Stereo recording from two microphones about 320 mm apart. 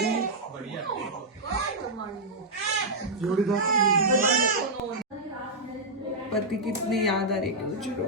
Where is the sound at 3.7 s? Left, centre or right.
Right.